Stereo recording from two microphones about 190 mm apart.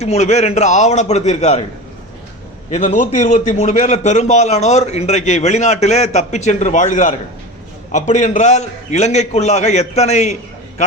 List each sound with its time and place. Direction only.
0.0 s a man's voice: 35° left (ahead or behind)
2.7 s a man's voice: 40° left (ahead or behind)